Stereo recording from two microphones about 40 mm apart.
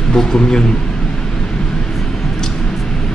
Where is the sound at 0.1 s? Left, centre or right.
Centre.